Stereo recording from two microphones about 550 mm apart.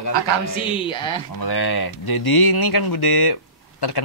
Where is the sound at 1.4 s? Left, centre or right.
Left.